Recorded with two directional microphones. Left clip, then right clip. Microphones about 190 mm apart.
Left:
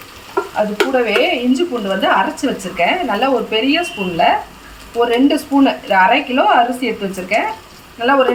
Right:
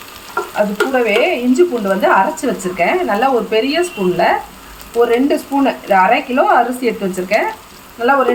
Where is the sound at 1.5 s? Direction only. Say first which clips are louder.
Right 4 dB; 15° right (ahead or behind).